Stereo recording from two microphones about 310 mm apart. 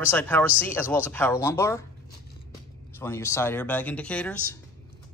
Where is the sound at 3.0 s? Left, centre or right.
Centre.